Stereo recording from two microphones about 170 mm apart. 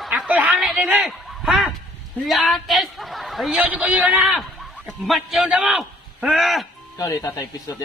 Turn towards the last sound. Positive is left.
turn(degrees=20)  # may be behind; listen again after turning